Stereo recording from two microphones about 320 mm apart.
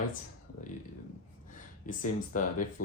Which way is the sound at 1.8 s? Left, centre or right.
Left.